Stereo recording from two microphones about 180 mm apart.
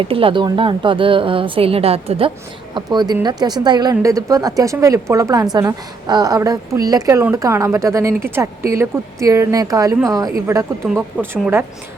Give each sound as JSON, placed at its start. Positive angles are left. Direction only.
{"t": 0.0, "sound": "a woman's voice", "side_deg": -30}